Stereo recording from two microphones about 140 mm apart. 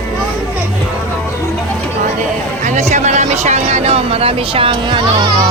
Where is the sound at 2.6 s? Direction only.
55° right (ahead or behind); by 5.5 s 30° right (ahead or behind).